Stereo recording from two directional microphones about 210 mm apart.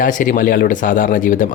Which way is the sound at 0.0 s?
40° left (ahead or behind).